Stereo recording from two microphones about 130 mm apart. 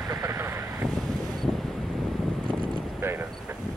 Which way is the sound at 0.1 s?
20° right (ahead or behind).